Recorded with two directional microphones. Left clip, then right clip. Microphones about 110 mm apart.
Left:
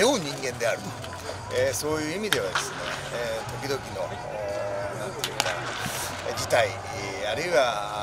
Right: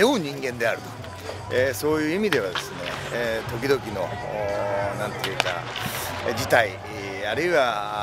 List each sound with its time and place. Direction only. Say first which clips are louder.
0.0 s a sound: right 2 dB; 15° left (ahead or behind)
1.5 s speech: right 4 dB; 20° left (ahead or behind)
6.2 s speech: right 3 dB; 20° left (ahead or behind)